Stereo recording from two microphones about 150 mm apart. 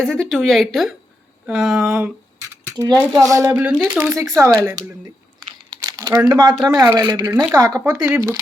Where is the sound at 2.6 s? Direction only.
25° right (ahead or behind).